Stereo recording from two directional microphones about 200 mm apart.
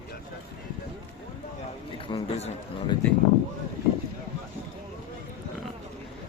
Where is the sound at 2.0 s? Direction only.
25° left (ahead or behind).